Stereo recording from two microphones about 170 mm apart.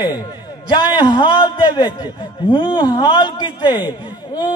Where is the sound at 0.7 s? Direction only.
25° left (ahead or behind).